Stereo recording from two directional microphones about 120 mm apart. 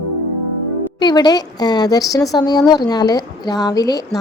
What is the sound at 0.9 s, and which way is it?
A woman's voice, 35° left (ahead or behind).